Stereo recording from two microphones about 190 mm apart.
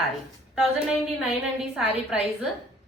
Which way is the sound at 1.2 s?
Centre (ahead or behind).